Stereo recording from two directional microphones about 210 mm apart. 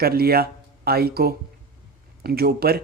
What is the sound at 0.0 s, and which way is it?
Speech, 45° right (ahead or behind).